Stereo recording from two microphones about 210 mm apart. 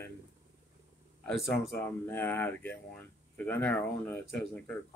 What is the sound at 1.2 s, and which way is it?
Speech, centre (ahead or behind).